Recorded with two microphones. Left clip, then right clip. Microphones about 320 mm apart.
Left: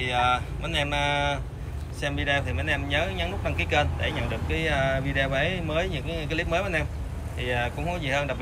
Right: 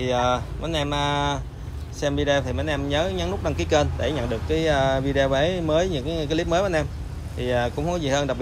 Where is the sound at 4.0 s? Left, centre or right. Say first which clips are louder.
Right 4 dB; right.